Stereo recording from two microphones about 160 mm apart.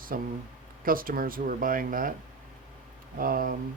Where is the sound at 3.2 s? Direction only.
65° right (ahead or behind).